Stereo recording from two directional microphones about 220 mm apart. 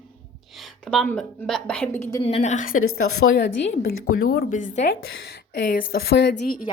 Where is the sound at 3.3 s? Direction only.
50° left (ahead or behind).